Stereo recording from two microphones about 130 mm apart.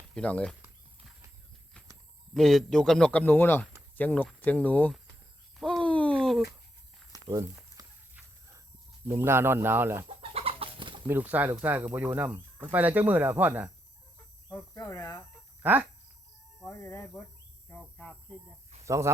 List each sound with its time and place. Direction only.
0.1 s speech: 10° left (ahead or behind)
2.3 s speech: centre (ahead or behind)
5.5 s a sound: 5° left (ahead or behind)
7.1 s a sound: 25° right (ahead or behind)
9.0 s speech: 20° right (ahead or behind)
10.2 s chicken: 45° right (ahead or behind)
11.1 s speech: 15° right (ahead or behind)
14.5 s cricket: 25° left (ahead or behind)
15.6 s speech: 15° right (ahead or behind)
16.6 s speech: 25° left (ahead or behind)
17.7 s speech: 10° left (ahead or behind)
18.9 s speech: 20° right (ahead or behind)